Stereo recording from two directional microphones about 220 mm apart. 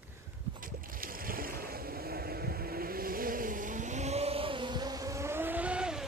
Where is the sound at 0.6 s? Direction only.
40° right (ahead or behind); by 6.0 s 5° right (ahead or behind).